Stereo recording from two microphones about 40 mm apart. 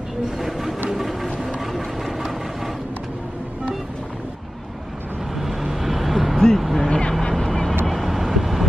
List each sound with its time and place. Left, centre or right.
0.4 s a sound: centre
0.8 s vehicle: centre
5.4 s vehicle: centre
6.3 s a sound: centre
6.9 s vehicle: left
7.3 s vehicle: centre